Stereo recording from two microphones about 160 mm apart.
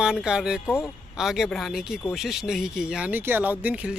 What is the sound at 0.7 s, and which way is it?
Speech, 15° left (ahead or behind).